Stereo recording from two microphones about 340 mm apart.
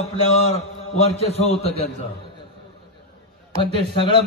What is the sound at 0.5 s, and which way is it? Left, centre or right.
A man's voice, centre.